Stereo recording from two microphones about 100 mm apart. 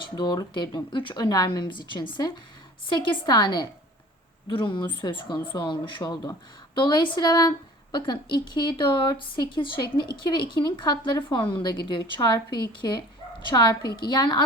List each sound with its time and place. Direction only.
0.0 s a woman's voice: 50° left (ahead or behind)